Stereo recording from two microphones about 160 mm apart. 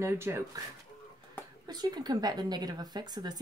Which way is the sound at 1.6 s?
25° right (ahead or behind).